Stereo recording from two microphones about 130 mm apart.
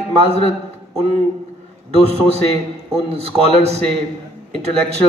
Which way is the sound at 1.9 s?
50° right (ahead or behind).